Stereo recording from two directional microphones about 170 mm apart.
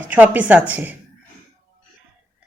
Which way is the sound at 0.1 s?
10° right (ahead or behind).